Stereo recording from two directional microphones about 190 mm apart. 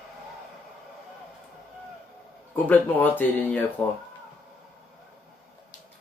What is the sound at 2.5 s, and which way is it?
Speech, 10° left (ahead or behind).